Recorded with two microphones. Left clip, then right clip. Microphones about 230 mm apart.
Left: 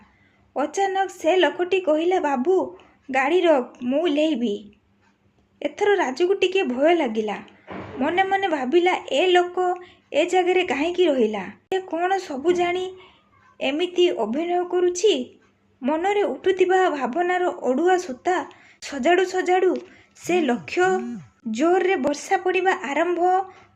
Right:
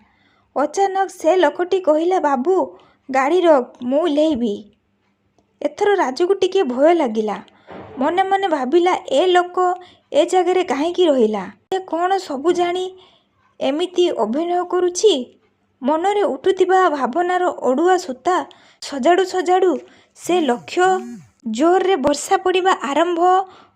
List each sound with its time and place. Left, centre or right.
0.5 s a man's voice: right